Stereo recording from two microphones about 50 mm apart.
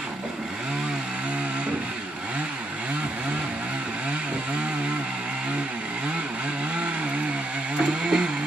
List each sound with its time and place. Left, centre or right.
7.8 s vehicle: centre